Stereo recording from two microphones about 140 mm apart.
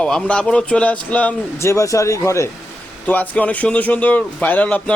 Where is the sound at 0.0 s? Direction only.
5° left (ahead or behind).